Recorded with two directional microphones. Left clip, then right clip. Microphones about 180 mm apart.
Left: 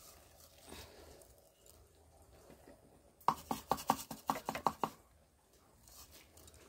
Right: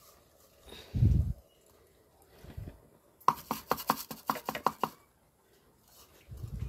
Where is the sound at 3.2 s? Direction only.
40° right (ahead or behind).